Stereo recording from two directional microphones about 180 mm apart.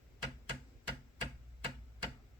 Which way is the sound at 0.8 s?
25° right (ahead or behind).